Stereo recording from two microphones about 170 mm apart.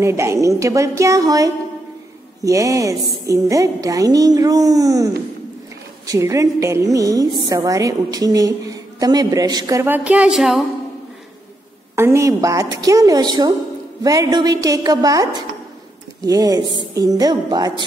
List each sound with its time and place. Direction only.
0.0 s a woman's voice: 15° right (ahead or behind)
11.9 s a woman's voice: 15° right (ahead or behind)
16.3 s a woman's voice: 20° right (ahead or behind)